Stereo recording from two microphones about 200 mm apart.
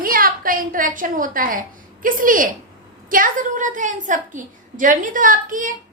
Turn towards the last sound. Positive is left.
turn(degrees=-40)  # may be behind; listen again after turning